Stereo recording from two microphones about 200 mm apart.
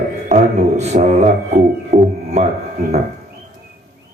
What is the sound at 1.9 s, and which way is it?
Music, 35° right (ahead or behind).